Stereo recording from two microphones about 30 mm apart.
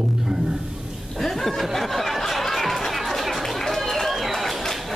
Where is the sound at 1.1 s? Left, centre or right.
Centre.